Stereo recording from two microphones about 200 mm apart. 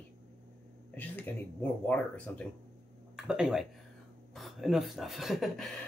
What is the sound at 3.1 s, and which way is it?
Speech, 5° right (ahead or behind).